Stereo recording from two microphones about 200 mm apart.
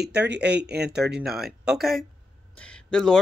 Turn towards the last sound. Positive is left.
turn(degrees=5)  # may be behind; listen again after turning